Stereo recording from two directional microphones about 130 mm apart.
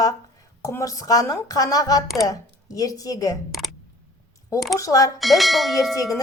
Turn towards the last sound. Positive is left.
turn(degrees=0)  # may be behind; listen again after turning